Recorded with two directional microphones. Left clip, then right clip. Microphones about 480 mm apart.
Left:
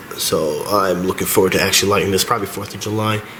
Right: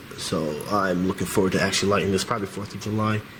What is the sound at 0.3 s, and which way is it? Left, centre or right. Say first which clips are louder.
Speech: left 8 dB; centre.